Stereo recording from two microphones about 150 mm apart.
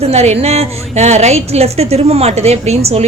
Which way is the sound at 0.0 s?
45° right (ahead or behind).